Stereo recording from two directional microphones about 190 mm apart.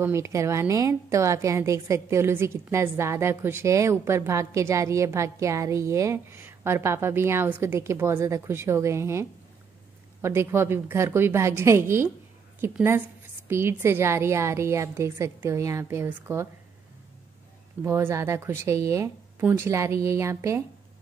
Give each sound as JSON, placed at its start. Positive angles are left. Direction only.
{"t": 0.0, "sound": "a woman's voice", "side_deg": -15}
{"t": 17.8, "sound": "a woman's voice", "side_deg": -15}